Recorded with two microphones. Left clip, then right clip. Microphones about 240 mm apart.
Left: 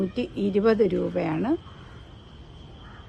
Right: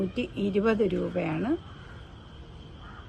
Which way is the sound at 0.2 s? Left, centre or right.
Left.